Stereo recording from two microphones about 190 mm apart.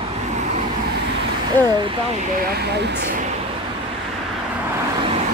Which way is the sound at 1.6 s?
10° left (ahead or behind).